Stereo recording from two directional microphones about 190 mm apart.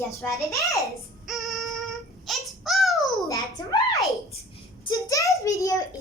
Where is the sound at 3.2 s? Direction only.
20° left (ahead or behind).